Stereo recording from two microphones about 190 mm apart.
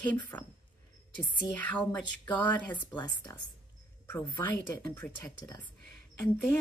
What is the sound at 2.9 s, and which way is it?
Speech, 25° left (ahead or behind).